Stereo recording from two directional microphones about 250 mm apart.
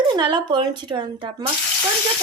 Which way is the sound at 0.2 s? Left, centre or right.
Centre.